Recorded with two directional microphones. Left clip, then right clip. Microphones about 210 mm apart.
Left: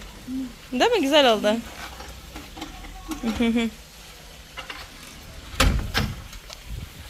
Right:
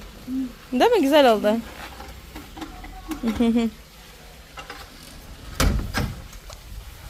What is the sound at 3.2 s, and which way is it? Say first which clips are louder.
Speech: right 2 dB; 20° right (ahead or behind).